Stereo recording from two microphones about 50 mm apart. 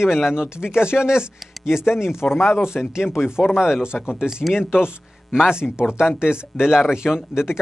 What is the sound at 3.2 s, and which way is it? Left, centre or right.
Speech, centre.